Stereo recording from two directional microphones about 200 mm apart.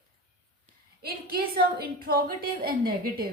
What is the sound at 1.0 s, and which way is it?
A woman's voice, 50° right (ahead or behind).